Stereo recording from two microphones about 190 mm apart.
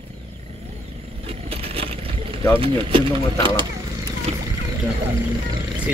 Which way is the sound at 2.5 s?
25° right (ahead or behind).